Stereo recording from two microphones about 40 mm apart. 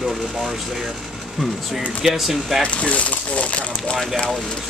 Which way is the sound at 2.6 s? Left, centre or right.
Left.